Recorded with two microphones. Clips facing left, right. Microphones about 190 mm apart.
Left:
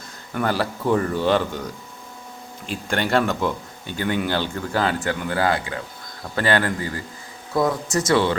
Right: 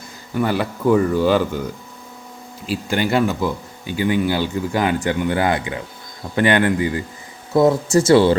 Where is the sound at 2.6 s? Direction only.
5° right (ahead or behind); by 8.4 s 30° right (ahead or behind).